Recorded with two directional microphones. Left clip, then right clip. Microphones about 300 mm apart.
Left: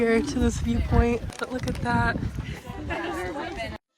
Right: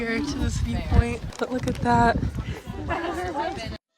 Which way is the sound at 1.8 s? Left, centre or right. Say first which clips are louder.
Right 6 dB; centre.